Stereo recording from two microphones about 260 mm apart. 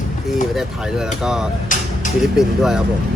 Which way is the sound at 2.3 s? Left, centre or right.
Centre.